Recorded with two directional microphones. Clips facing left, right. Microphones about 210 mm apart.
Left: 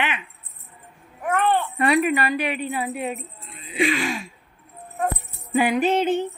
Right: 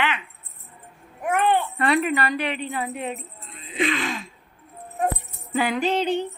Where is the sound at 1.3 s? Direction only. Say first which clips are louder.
Even; 15° right (ahead or behind).